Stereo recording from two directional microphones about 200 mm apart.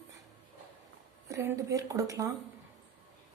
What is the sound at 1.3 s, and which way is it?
Speech, 15° right (ahead or behind).